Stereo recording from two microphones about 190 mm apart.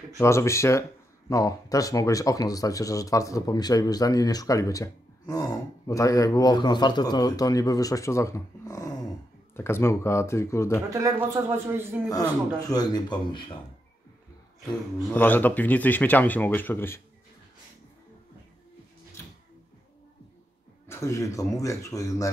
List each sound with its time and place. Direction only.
0.2 s speech: 15° left (ahead or behind)
10.9 s a man's voice: 15° right (ahead or behind)
12.1 s speech: 20° left (ahead or behind)
15.0 s speech: 10° left (ahead or behind)
20.9 s speech: 15° left (ahead or behind)